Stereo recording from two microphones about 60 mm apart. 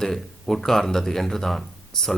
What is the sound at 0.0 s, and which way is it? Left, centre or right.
A man's voice, centre.